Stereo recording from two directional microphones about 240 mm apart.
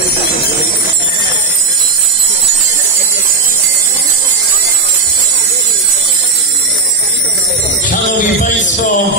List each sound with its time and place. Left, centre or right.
7.9 s music: left